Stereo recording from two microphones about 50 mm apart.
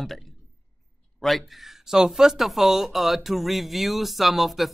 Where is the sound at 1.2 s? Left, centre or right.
Centre.